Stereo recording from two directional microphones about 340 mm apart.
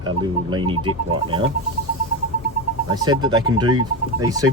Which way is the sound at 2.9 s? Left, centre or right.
Centre.